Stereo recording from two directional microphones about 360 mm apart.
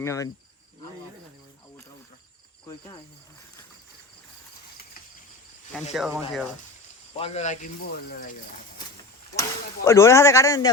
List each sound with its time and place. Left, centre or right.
0.0 s speech: centre
2.6 s speech: centre
5.9 s speech: centre
7.1 s speech: centre
9.3 s speech: centre